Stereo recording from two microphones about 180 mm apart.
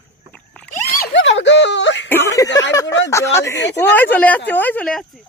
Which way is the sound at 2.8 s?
85° left.